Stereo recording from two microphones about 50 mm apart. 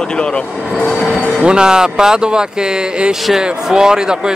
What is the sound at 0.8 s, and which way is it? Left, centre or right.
Speech, centre.